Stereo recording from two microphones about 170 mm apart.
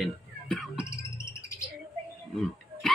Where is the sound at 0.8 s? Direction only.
15° left (ahead or behind).